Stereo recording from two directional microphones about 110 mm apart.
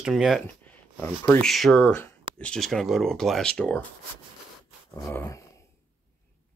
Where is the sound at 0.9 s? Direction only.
20° left (ahead or behind).